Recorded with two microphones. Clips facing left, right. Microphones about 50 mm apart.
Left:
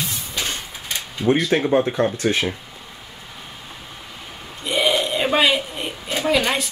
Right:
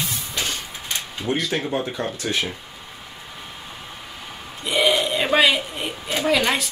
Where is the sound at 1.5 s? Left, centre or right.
Left.